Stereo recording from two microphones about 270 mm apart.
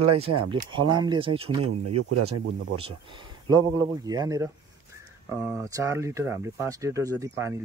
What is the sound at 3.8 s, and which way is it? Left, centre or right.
Speech, centre.